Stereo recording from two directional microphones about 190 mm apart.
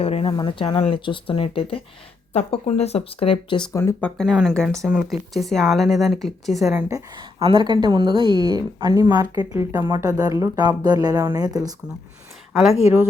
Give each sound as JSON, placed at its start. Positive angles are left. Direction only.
{"t": 0.0, "sound": "speech", "side_deg": 30}
{"t": 4.2, "sound": "speech", "side_deg": 0}
{"t": 6.8, "sound": "a woman's voice", "side_deg": -15}